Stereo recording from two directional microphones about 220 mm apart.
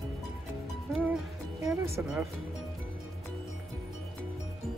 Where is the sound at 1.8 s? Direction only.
10° right (ahead or behind).